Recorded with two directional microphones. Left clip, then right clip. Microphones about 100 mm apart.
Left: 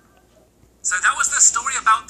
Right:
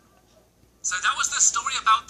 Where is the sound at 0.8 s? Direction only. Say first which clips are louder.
Left 5 dB; 10° right (ahead or behind).